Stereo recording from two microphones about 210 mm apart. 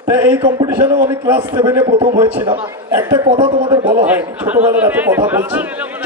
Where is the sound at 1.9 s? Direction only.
25° right (ahead or behind).